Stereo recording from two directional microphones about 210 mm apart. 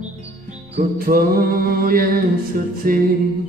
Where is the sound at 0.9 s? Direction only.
45° right (ahead or behind).